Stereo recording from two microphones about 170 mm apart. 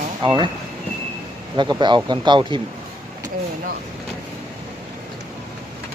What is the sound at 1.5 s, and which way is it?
Speech, 25° right (ahead or behind).